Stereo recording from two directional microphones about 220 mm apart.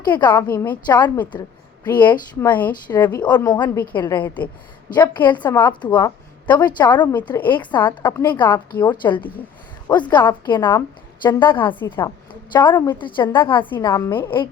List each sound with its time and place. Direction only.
0.0 s a woman's voice: 20° left (ahead or behind)
0.5 s a woman's voice: 10° left (ahead or behind)
0.9 s a woman's voice: 20° left (ahead or behind)
3.3 s a woman's voice: 10° left (ahead or behind)
3.9 s a woman's voice: 20° left (ahead or behind)